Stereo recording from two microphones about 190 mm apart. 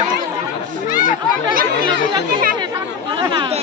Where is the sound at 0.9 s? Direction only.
45° left (ahead or behind).